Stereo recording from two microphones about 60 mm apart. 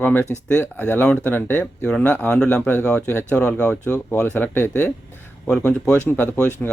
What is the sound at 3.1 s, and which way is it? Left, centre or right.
Speech, left.